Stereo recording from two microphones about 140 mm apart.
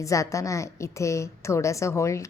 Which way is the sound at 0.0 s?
25° left (ahead or behind).